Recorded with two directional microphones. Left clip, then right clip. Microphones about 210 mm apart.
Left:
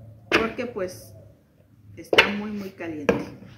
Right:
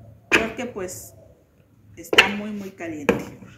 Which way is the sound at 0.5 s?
15° right (ahead or behind).